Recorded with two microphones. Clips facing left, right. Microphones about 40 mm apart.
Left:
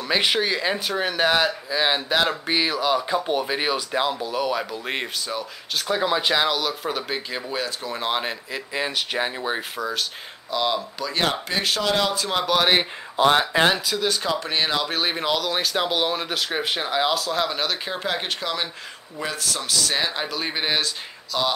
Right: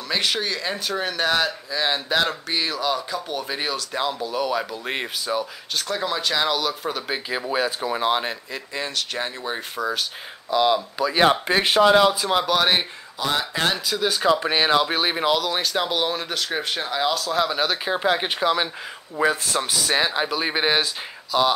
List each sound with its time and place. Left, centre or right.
0.1 s speech: centre
3.1 s speech: left
3.4 s speech: centre
5.9 s speech: centre
6.4 s speech: centre
7.5 s speech: centre
8.0 s speech: centre
9.8 s speech: centre
11.4 s speech: right
11.9 s speech: centre
13.2 s speech: left
13.7 s speech: centre